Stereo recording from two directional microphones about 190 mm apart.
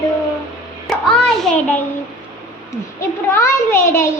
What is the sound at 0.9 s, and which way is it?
Child singing, 5° left (ahead or behind).